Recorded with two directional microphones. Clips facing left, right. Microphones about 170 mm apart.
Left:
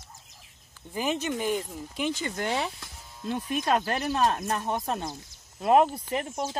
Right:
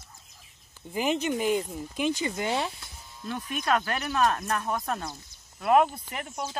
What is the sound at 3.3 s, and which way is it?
Speech, 25° left (ahead or behind).